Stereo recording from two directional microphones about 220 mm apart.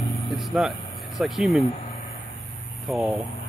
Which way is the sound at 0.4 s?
Centre (ahead or behind).